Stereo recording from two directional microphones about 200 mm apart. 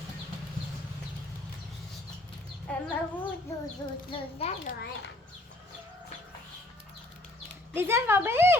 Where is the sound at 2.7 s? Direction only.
5° left (ahead or behind).